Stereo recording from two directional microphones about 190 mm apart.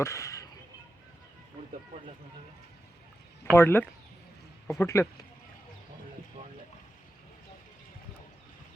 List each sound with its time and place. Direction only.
0.0 s speech: 15° left (ahead or behind)
3.5 s speech: 10° left (ahead or behind)